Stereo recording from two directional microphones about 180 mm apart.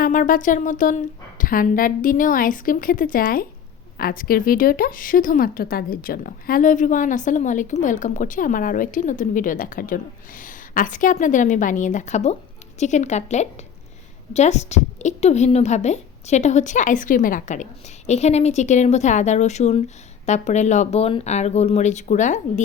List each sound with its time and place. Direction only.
0.0 s a woman's voice: 50° left (ahead or behind)